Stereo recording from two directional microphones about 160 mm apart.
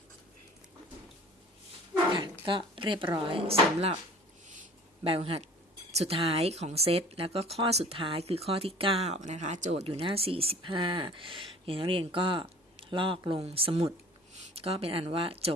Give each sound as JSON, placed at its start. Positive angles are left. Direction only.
{"t": 2.5, "sound": "speech", "side_deg": -30}
{"t": 4.4, "sound": "a sound", "side_deg": -50}
{"t": 5.0, "sound": "speech", "side_deg": -35}